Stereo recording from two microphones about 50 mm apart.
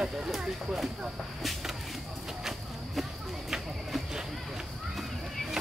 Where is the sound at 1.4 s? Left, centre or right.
Centre.